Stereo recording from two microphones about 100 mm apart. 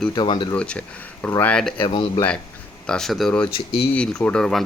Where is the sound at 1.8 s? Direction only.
55° left (ahead or behind).